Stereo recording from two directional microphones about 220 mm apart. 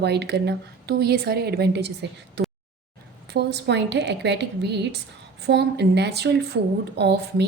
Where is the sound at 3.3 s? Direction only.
50° right (ahead or behind).